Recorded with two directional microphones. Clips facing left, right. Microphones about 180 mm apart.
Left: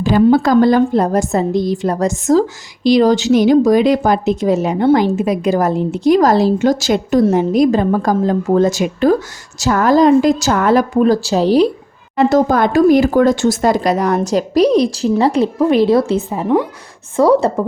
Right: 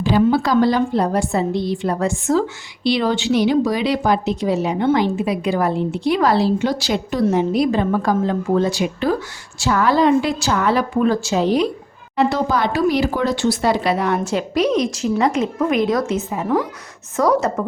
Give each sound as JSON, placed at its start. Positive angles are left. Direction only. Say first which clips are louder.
{"t": 0.0, "sound": "a woman's voice", "louder": "left 5 dB", "side_deg": 50}
{"t": 12.1, "sound": "a woman's voice", "louder": "left 6 dB", "side_deg": 45}